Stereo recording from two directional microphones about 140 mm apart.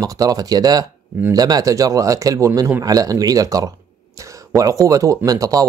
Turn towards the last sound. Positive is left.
turn(degrees=-25)  # may be behind; listen again after turning